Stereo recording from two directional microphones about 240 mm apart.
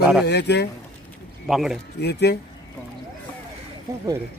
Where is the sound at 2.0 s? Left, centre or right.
Left.